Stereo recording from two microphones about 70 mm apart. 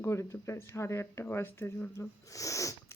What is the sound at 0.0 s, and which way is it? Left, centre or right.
Speech, left.